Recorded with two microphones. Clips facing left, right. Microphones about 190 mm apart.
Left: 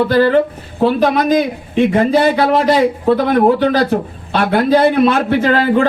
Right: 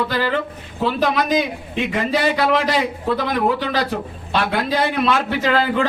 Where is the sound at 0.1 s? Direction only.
40° left (ahead or behind).